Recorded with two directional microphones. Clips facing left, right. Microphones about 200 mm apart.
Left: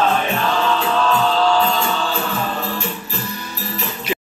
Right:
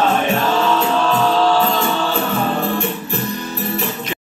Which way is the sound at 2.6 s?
55° right (ahead or behind).